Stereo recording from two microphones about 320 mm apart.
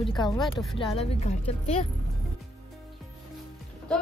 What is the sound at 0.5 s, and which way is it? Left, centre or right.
Speech, centre.